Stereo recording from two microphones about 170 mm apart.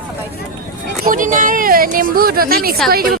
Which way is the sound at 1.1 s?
50° right (ahead or behind).